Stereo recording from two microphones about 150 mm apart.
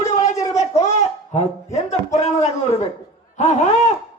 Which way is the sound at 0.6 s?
50° left (ahead or behind).